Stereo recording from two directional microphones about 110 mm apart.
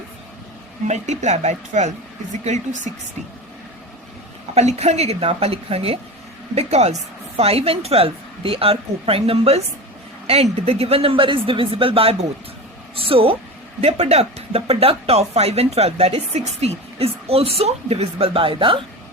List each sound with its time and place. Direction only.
0.9 s a woman's voice: 90° right
4.5 s a woman's voice: 85° right; by 13.3 s 55° right (ahead or behind)
14.0 s a woman's voice: 75° right (ahead or behind); by 18.8 s 55° right (ahead or behind)